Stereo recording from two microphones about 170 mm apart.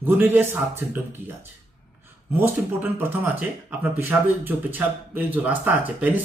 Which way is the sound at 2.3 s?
10° right (ahead or behind).